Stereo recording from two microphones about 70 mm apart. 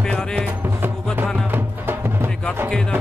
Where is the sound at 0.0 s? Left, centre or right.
Centre.